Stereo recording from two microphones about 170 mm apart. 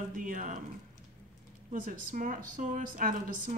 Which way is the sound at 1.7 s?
50° right (ahead or behind).